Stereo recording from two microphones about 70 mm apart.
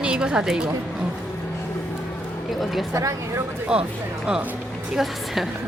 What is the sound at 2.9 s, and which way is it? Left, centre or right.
Speech, right.